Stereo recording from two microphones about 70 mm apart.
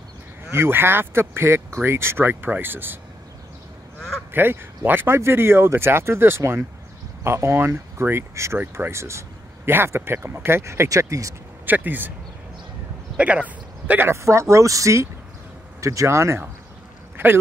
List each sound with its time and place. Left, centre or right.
0.5 s speech: right
4.3 s speech: right
11.6 s speech: right
13.2 s speech: centre
14.0 s speech: right
17.2 s speech: right